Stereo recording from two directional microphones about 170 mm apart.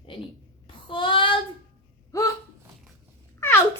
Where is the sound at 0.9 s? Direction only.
30° left (ahead or behind).